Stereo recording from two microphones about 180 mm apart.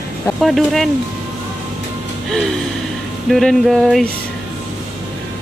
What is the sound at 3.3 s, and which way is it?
Speech, centre (ahead or behind).